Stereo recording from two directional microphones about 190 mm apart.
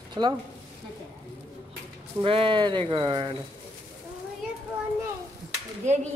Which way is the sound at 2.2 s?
25° right (ahead or behind).